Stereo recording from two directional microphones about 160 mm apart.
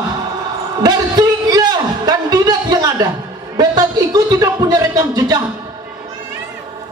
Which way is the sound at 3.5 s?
25° right (ahead or behind).